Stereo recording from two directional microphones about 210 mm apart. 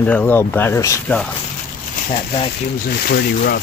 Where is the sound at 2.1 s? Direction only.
25° left (ahead or behind).